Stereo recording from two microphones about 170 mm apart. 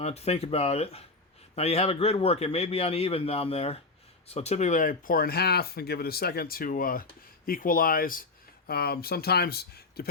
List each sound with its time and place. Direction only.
0.0 s a man's voice: 40° left (ahead or behind); by 10.1 s 65° left (ahead or behind)